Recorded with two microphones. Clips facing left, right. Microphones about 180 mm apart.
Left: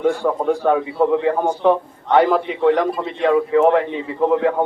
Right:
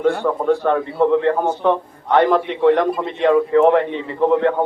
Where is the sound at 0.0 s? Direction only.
10° left (ahead or behind).